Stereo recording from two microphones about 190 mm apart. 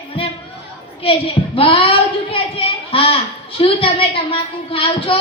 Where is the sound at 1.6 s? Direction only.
30° left (ahead or behind).